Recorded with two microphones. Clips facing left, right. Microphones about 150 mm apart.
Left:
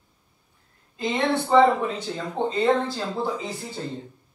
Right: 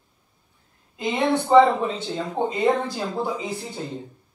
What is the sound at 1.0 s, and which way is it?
Speech, 20° right (ahead or behind).